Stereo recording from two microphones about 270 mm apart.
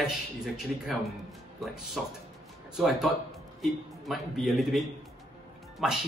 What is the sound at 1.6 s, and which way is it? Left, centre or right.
A man's voice, centre.